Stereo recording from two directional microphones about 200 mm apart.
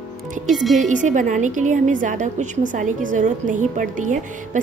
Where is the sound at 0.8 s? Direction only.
40° right (ahead or behind).